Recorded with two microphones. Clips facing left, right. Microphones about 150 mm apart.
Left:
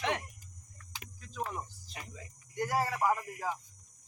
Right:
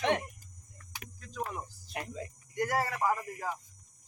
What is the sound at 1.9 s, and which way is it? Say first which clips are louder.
Speech: right 10 dB; 70° right (ahead or behind).